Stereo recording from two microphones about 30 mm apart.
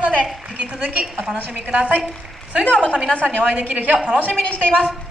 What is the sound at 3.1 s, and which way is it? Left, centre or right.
Speech, left.